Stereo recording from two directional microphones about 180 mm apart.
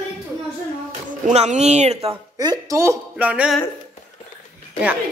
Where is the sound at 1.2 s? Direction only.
40° right (ahead or behind).